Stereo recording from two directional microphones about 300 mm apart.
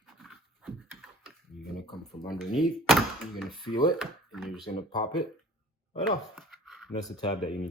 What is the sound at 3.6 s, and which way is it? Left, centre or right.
Speech, centre.